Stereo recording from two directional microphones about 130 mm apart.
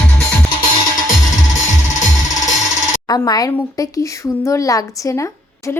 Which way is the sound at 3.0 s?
30° left (ahead or behind).